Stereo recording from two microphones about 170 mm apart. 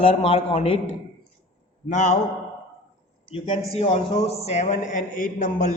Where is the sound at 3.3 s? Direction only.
30° left (ahead or behind).